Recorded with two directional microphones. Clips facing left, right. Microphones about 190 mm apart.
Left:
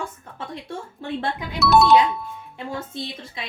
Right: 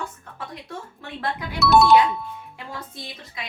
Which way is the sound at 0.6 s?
30° left (ahead or behind).